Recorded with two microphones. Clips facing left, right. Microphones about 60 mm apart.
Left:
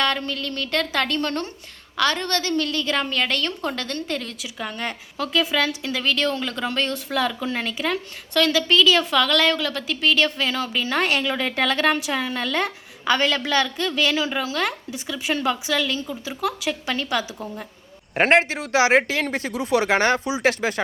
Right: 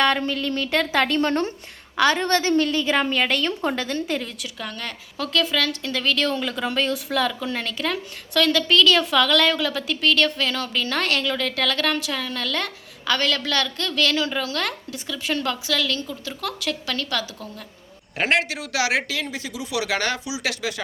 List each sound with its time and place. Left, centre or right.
0.0 s a woman's voice: centre
4.6 s a woman's voice: left
5.1 s speech: centre
18.2 s speech: left